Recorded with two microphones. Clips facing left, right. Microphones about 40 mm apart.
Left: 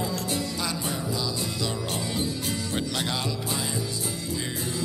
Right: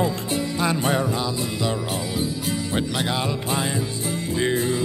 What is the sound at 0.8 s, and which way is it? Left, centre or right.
Speech, right.